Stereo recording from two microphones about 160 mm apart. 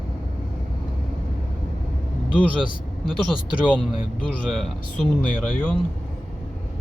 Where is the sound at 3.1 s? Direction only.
5° right (ahead or behind).